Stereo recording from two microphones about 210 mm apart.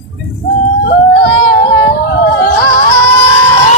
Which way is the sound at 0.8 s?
55° left (ahead or behind).